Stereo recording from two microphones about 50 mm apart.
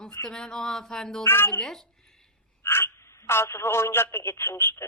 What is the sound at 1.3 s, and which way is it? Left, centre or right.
Speech, left.